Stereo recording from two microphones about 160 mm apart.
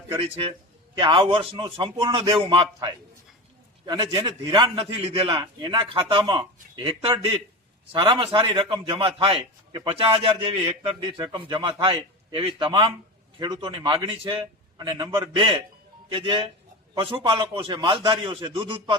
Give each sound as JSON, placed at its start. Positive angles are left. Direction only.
{"t": 0.1, "sound": "a man's voice", "side_deg": -35}